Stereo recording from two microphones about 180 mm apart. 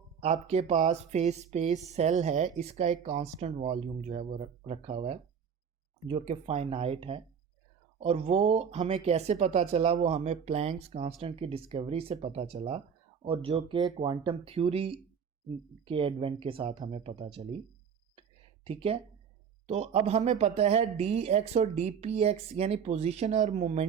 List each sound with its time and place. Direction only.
0.2 s speech: 40° right (ahead or behind)
18.2 s a sound: 30° right (ahead or behind)
19.6 s speech: 35° right (ahead or behind)